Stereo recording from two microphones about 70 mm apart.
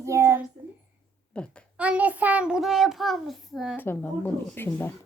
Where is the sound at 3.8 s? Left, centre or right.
Left.